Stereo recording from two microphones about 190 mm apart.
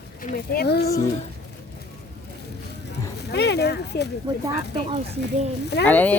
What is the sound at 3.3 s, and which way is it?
Speech, 60° left (ahead or behind).